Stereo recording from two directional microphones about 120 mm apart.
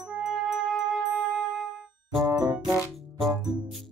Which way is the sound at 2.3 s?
30° right (ahead or behind).